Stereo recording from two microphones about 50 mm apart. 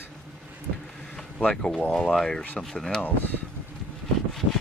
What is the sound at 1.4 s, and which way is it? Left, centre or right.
Speech, left.